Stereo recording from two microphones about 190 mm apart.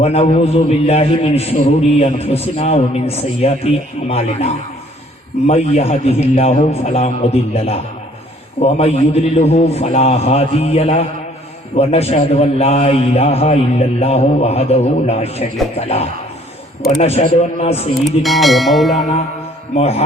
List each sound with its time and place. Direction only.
0.0 s a man's voice: 35° left (ahead or behind)
5.5 s a man's voice: 35° left (ahead or behind)
17.0 s a man's voice: 35° left (ahead or behind)
18.0 s bell: centre (ahead or behind)
19.7 s a man's voice: 35° left (ahead or behind)